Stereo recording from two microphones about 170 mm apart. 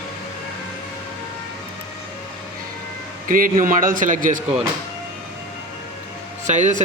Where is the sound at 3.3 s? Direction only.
55° right (ahead or behind).